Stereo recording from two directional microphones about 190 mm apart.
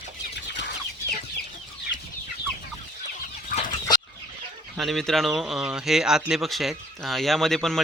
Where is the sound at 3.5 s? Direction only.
45° left (ahead or behind).